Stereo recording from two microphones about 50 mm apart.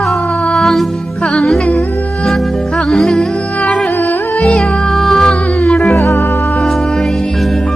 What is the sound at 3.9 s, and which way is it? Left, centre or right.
Music, left.